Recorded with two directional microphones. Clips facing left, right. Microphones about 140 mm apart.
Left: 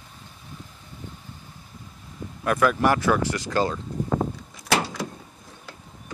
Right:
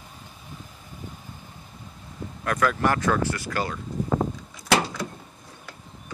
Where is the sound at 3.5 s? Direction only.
25° left (ahead or behind).